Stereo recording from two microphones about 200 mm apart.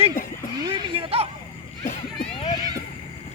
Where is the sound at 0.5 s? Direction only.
20° right (ahead or behind).